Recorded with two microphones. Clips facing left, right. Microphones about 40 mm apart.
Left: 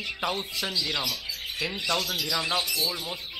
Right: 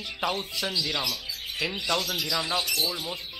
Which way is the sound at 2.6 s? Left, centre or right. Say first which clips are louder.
Right 1 dB; right.